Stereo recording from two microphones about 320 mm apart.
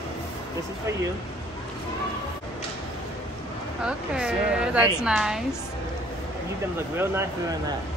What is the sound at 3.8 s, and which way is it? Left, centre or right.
A woman's voice, centre.